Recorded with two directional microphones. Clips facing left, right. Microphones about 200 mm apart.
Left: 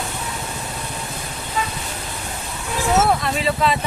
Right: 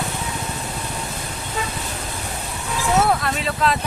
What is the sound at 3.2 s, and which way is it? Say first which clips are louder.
Vehicle: left 2 dB; centre (ahead or behind).